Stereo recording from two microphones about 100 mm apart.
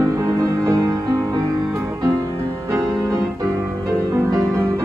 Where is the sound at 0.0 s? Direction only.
35° right (ahead or behind).